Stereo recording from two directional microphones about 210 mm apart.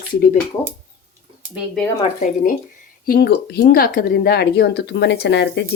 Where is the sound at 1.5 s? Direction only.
Centre (ahead or behind).